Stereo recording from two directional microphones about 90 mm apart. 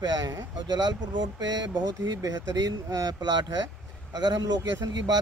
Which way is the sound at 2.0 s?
45° right (ahead or behind).